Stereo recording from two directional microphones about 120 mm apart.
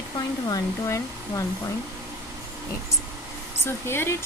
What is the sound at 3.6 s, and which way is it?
Speech, 20° left (ahead or behind).